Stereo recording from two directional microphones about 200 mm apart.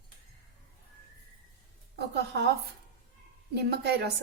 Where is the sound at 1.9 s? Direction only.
55° right (ahead or behind).